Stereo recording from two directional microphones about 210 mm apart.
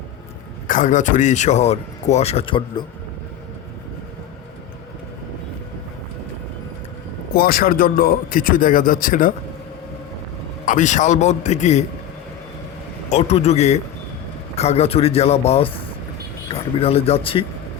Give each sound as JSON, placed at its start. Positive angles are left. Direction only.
{"t": 0.7, "sound": "speech", "side_deg": 40}
{"t": 7.3, "sound": "speech", "side_deg": 45}
{"t": 10.7, "sound": "speech", "side_deg": 35}
{"t": 13.1, "sound": "a man's voice", "side_deg": 30}